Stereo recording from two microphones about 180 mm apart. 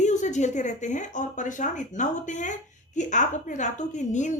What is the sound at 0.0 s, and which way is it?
A woman's voice, 40° left (ahead or behind).